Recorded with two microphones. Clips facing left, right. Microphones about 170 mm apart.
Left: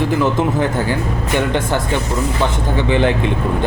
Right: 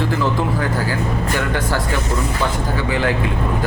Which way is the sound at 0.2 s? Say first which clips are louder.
Left 4 dB; 20° left (ahead or behind).